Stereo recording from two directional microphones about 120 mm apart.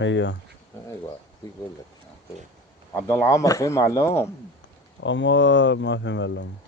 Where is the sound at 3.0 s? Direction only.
25° left (ahead or behind).